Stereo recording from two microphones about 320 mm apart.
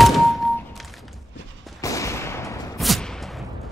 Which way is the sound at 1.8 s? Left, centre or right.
Centre.